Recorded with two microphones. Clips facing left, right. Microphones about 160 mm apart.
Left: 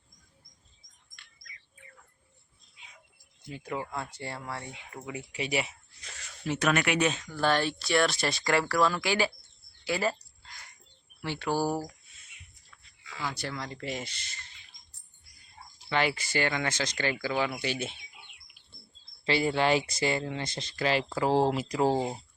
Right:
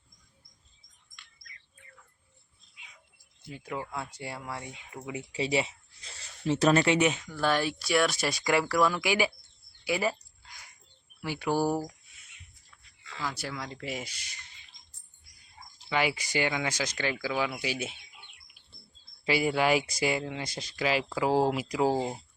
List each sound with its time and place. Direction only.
3.5 s speech: centre (ahead or behind)
5.0 s speech: 25° right (ahead or behind)
7.3 s speech: 5° right (ahead or behind)
9.8 s a sound: 10° right (ahead or behind)
11.2 s speech: 10° right (ahead or behind)
13.2 s speech: 5° right (ahead or behind)
15.9 s speech: 10° right (ahead or behind)
19.2 s speech: 10° right (ahead or behind)